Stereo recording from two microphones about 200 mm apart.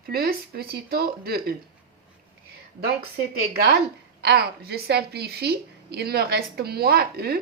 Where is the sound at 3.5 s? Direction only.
50° right (ahead or behind).